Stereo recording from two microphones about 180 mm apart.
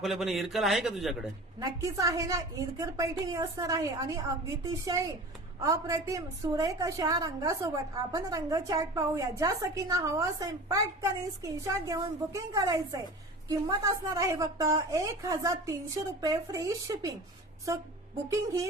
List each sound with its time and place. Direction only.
0.0 s speech: centre (ahead or behind)
1.5 s a woman's voice: 20° right (ahead or behind)